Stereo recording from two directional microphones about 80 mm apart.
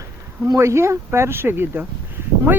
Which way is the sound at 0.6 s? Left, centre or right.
Right.